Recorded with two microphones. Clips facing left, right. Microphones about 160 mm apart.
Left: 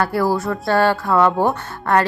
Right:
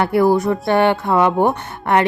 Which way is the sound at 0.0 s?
20° right (ahead or behind).